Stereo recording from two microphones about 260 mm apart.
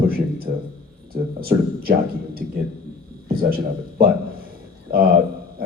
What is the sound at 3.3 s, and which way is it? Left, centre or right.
Speech, right.